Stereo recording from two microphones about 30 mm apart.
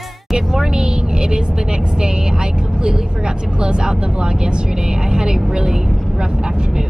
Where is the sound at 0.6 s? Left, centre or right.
Right.